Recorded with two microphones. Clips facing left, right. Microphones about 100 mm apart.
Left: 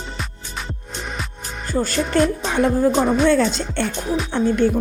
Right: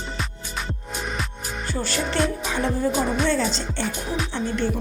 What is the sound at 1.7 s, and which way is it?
Music, 45° left (ahead or behind).